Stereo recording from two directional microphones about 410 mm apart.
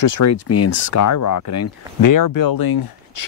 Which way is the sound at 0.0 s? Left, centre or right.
Left.